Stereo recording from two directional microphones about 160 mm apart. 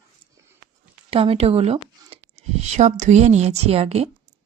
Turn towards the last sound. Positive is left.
turn(degrees=-40)  # may be behind; listen again after turning